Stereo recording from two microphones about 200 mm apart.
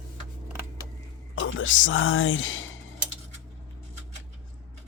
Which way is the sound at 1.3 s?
75° left (ahead or behind).